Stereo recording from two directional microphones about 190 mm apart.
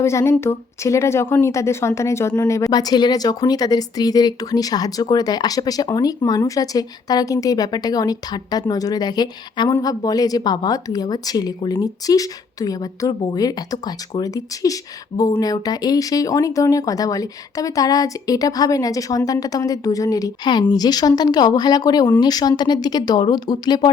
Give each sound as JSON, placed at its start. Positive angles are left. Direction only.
{"t": 0.0, "sound": "a woman's voice", "side_deg": 15}